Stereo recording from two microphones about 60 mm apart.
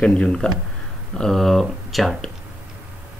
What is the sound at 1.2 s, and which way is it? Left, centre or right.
Speech, centre.